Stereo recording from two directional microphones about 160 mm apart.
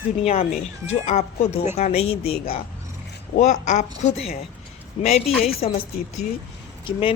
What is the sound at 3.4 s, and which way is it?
Speech, 50° left (ahead or behind).